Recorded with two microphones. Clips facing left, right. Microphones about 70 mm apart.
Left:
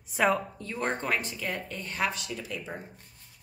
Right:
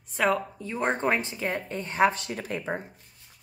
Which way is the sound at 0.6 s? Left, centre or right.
Centre.